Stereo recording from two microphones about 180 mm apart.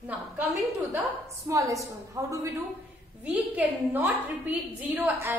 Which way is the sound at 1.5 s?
20° right (ahead or behind).